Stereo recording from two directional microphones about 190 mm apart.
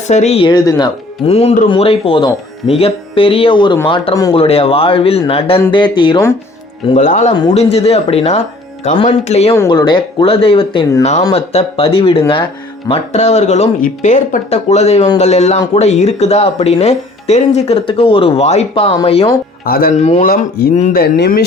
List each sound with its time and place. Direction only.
0.1 s speech: 35° left (ahead or behind); by 0.9 s 20° left (ahead or behind)
1.3 s speech: 30° left (ahead or behind)
6.8 s speech: 40° left (ahead or behind)
9.6 s speech: 25° left (ahead or behind)
19.6 s speech: 50° left (ahead or behind)
20.0 s speech: 35° left (ahead or behind)
20.3 s speech: 50° left (ahead or behind)